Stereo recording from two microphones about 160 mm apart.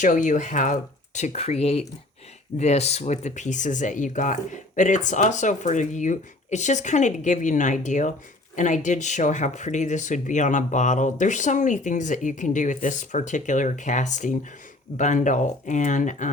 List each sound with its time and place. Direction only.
0.0 s speech: 50° left (ahead or behind)